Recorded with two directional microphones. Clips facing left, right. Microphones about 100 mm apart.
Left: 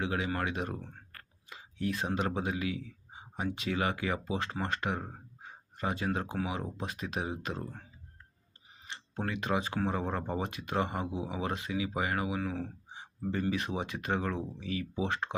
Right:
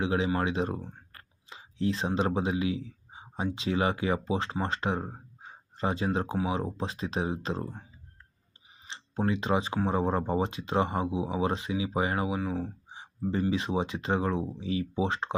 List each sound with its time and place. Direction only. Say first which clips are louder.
0.0 s speech: right 5 dB; 25° right (ahead or behind)
8.9 s speech: right 7 dB; 25° right (ahead or behind)
12.4 s speech: right 3 dB; 15° right (ahead or behind)
12.9 s a sound: right 4 dB; 25° right (ahead or behind)
13.5 s speech: right 5 dB; 25° right (ahead or behind)